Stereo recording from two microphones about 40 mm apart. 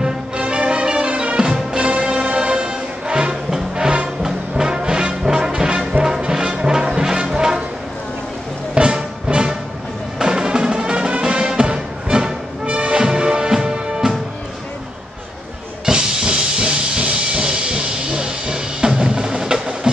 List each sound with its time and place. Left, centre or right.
0.4 s music: right
8.7 s music: right
15.8 s music: centre